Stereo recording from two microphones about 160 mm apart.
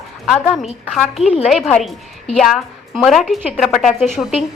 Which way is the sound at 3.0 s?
Centre (ahead or behind).